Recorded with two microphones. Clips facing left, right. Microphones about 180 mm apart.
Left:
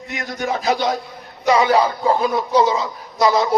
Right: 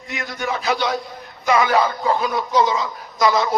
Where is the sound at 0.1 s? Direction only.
40° left (ahead or behind).